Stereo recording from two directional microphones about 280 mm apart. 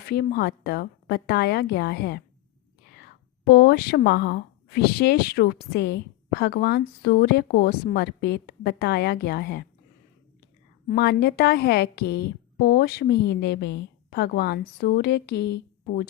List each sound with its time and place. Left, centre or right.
0.0 s speech: left
3.4 s speech: left
10.8 s speech: left